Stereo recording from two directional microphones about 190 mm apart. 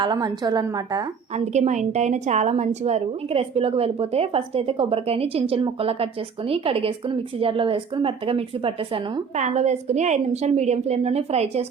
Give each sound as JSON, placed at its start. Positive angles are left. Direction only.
{"t": 0.0, "sound": "a woman's voice", "side_deg": -20}
{"t": 1.5, "sound": "speech", "side_deg": -40}